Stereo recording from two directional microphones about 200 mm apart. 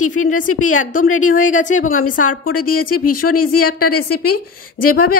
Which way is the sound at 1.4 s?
40° left (ahead or behind).